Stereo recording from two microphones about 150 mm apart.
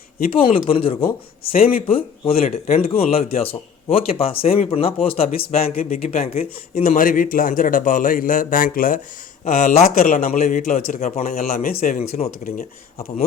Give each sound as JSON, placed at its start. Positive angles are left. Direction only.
{"t": 0.3, "sound": "speech", "side_deg": 40}
{"t": 6.4, "sound": "a man's voice", "side_deg": 60}
{"t": 10.3, "sound": "speech", "side_deg": 50}
{"t": 10.6, "sound": "a man's voice", "side_deg": 60}
{"t": 11.3, "sound": "speech", "side_deg": 75}
{"t": 11.9, "sound": "speech", "side_deg": 45}